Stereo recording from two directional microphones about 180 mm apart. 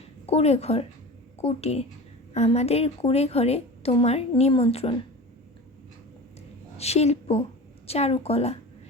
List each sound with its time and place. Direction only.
0.3 s a woman's voice: 35° left (ahead or behind)
6.7 s a woman's voice: 35° left (ahead or behind)